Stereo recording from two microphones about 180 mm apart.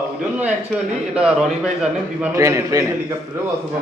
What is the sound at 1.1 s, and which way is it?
Speech, 5° right (ahead or behind).